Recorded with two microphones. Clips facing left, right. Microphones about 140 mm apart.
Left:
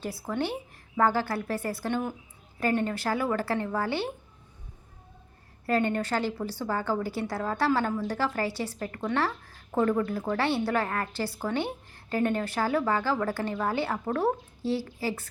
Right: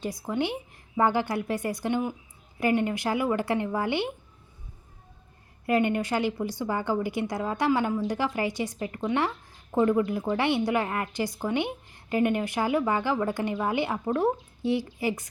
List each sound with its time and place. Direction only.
0.3 s a woman's voice: 15° right (ahead or behind)
5.6 s a woman's voice: 15° right (ahead or behind)